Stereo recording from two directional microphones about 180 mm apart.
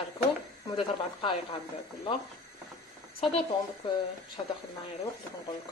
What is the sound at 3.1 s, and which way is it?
Speech, 30° left (ahead or behind).